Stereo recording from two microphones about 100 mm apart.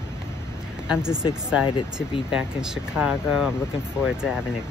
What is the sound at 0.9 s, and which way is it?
Speech, 10° right (ahead or behind).